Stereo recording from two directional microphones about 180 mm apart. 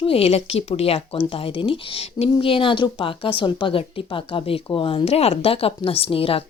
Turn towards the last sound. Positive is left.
turn(degrees=30)  # may be behind; listen again after turning